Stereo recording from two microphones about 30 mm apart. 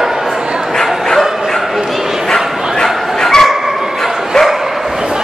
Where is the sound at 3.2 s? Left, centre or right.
Centre.